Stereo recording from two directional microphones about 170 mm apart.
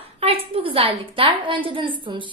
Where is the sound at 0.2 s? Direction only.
35° right (ahead or behind).